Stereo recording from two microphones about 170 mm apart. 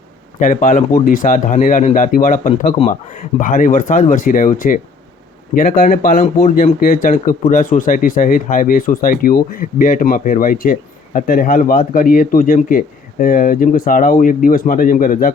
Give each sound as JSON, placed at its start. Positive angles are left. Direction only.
{"t": 0.3, "sound": "speech", "side_deg": 50}